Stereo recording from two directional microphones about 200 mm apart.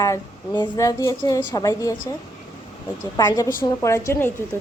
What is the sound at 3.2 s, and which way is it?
A woman's voice, 20° left (ahead or behind).